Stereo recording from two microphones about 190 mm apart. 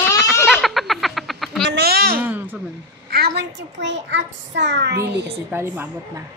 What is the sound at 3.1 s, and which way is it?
A child's voice, 60° right (ahead or behind).